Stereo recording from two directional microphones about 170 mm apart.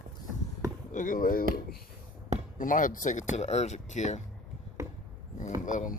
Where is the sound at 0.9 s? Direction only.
50° left (ahead or behind).